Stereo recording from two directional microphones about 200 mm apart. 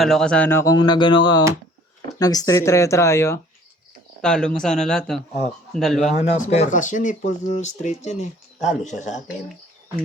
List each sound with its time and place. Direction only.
0.0 s speech: centre (ahead or behind)
6.4 s speech: 35° left (ahead or behind)